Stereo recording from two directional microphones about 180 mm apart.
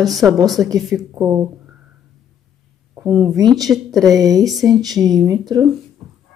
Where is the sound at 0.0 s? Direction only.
Centre (ahead or behind).